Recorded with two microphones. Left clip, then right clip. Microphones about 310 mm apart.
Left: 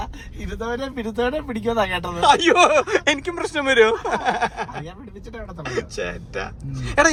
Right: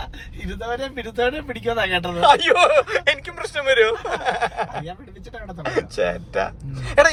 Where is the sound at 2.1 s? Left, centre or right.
Centre.